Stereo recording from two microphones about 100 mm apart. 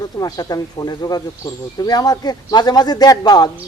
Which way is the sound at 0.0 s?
40° left (ahead or behind).